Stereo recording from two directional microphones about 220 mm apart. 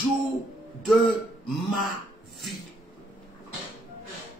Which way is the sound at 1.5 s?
Centre (ahead or behind).